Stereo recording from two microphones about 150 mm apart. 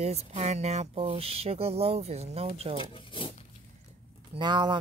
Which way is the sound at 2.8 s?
35° left (ahead or behind).